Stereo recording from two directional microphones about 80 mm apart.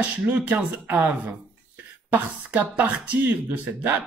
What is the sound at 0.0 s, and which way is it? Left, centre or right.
Speech, centre.